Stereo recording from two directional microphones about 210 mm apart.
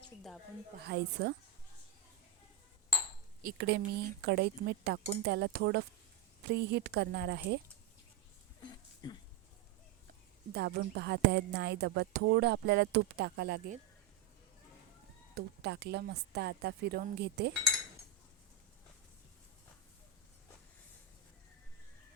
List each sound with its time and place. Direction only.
0.9 s a woman's voice: 50° right (ahead or behind)
3.4 s a woman's voice: 50° right (ahead or behind)
8.6 s a sound: 20° left (ahead or behind)
10.5 s a woman's voice: 50° right (ahead or behind)
15.4 s a woman's voice: 50° right (ahead or behind)